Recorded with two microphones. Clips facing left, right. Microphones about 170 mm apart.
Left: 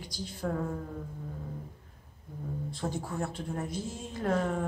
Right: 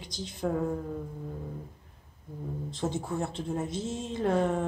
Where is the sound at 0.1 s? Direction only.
20° right (ahead or behind).